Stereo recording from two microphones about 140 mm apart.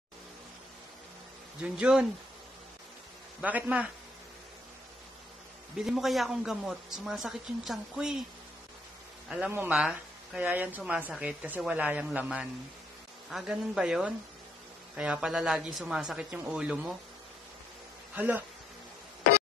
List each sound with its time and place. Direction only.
1.6 s a woman's voice: 5° right (ahead or behind)
3.3 s a woman's voice: 10° right (ahead or behind)
5.8 s a woman's voice: centre (ahead or behind)
9.5 s a woman's voice: 15° right (ahead or behind)
18.1 s speech: 10° right (ahead or behind)